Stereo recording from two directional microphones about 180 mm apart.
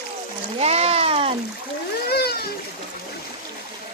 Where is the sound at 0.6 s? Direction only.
35° right (ahead or behind).